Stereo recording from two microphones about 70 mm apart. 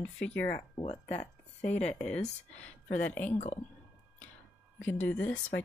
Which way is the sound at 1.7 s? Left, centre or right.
Centre.